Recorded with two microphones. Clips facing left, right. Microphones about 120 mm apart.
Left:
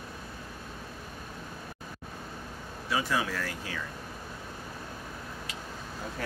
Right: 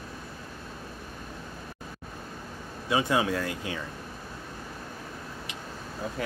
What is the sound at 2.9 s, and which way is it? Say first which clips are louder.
Speech: right 5 dB; 25° right (ahead or behind).